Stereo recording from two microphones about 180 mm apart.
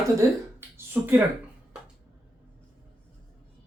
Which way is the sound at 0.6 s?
10° right (ahead or behind).